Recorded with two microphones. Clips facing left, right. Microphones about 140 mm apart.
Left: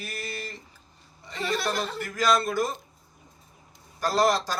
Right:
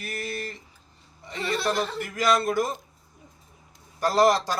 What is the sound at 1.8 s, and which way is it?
A man's voice, 20° right (ahead or behind).